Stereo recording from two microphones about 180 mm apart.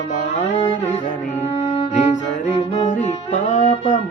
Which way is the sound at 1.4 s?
35° left (ahead or behind).